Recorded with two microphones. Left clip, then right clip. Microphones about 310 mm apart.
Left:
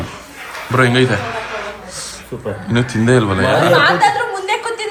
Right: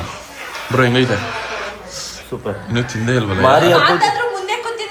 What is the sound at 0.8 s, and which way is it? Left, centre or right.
Speech, centre.